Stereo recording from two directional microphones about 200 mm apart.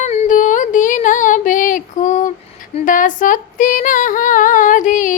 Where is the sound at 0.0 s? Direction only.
35° left (ahead or behind).